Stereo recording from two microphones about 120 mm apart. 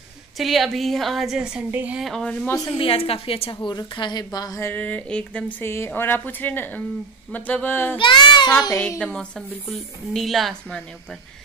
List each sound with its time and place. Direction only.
0.4 s a woman's voice: centre (ahead or behind)
2.0 s a woman's voice: 5° left (ahead or behind)
2.4 s a woman's voice: 25° left (ahead or behind)
2.8 s a woman's voice: 50° left (ahead or behind)
3.7 s a woman's voice: 40° left (ahead or behind)
4.6 s speech: 15° left (ahead or behind)
8.0 s a woman's voice: 40° left (ahead or behind)
9.7 s a woman's voice: centre (ahead or behind)